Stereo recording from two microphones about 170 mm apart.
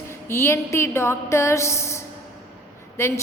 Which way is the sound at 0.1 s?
15° left (ahead or behind).